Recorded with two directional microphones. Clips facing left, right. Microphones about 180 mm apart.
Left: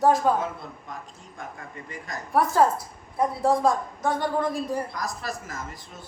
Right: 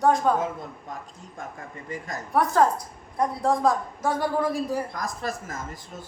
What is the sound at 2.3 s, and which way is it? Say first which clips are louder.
A woman's voice: even; centre (ahead or behind).